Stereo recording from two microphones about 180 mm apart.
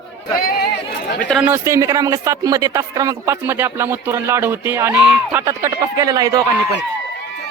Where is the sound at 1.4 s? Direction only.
10° right (ahead or behind).